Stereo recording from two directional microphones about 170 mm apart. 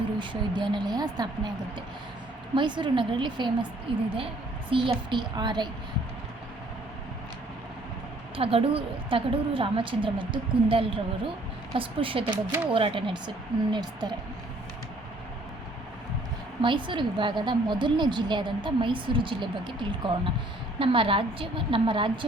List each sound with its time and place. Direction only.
0.2 s a woman's voice: 25° right (ahead or behind)
2.6 s a woman's voice: 30° right (ahead or behind)
8.4 s a woman's voice: 35° right (ahead or behind)
16.6 s a woman's voice: 30° right (ahead or behind)